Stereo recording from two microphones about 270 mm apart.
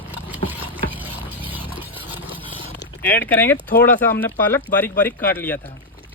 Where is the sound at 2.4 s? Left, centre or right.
Centre.